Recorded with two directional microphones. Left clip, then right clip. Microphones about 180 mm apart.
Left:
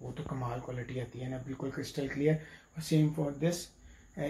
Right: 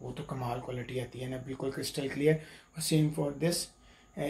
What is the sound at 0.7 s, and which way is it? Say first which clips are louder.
Speech: right 3 dB; 15° right (ahead or behind).